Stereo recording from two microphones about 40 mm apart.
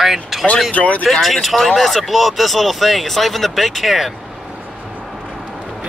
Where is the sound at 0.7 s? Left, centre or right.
Left.